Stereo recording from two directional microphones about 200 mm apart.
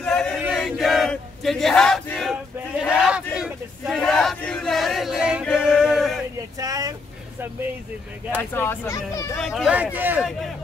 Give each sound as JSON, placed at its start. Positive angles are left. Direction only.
{"t": 0.0, "sound": "chant", "side_deg": 5}
{"t": 0.4, "sound": "a sound", "side_deg": 0}
{"t": 5.6, "sound": "male singing", "side_deg": -5}
{"t": 6.6, "sound": "vehicle", "side_deg": -20}
{"t": 8.4, "sound": "speech", "side_deg": 10}
{"t": 9.4, "sound": "a man's voice", "side_deg": 0}